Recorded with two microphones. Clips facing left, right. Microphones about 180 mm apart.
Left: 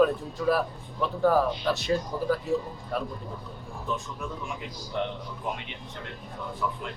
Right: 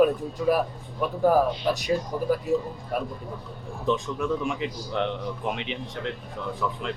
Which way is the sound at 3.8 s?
90° right.